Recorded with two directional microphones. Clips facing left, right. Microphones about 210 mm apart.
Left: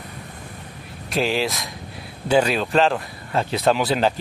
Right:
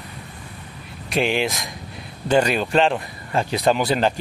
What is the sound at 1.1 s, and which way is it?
Speech, centre (ahead or behind).